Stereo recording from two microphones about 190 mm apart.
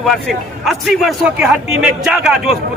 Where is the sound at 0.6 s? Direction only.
Centre (ahead or behind).